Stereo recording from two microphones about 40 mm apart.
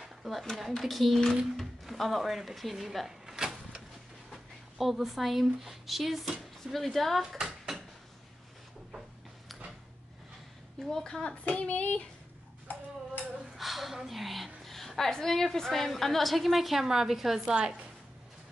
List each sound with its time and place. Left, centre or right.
0.0 s speech: centre
3.3 s a sound: centre
4.3 s speech: centre
7.4 s a sound: centre
10.8 s a woman's voice: centre
11.2 s child singing: left
13.6 s a woman's voice: centre
17.5 s a woman's voice: right